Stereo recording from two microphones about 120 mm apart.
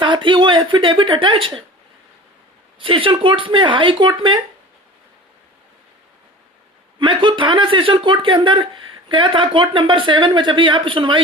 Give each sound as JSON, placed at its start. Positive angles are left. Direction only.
{"t": 0.0, "sound": "speech", "side_deg": -45}
{"t": 2.7, "sound": "speech", "side_deg": -45}
{"t": 7.0, "sound": "speech", "side_deg": -45}